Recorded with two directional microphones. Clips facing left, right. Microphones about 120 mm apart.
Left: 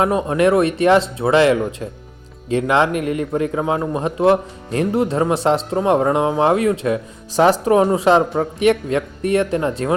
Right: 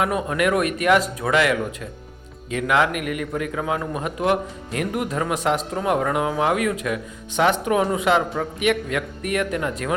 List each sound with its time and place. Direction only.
0.0 s a man's voice: 30° left (ahead or behind)